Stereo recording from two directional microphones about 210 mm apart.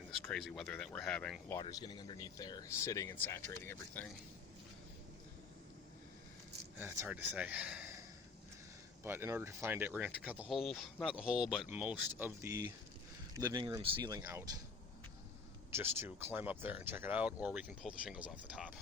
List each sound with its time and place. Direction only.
0.3 s speech: 5° left (ahead or behind)
1.5 s speech: 20° left (ahead or behind)
6.7 s speech: 10° right (ahead or behind)
9.0 s speech: 10° right (ahead or behind)
15.7 s speech: 10° right (ahead or behind)